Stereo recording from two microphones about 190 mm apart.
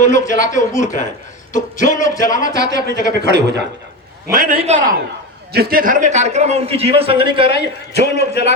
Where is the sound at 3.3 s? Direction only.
65° right (ahead or behind).